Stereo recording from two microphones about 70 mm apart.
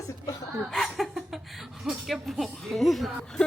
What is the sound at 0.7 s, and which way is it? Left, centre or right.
Speech, centre.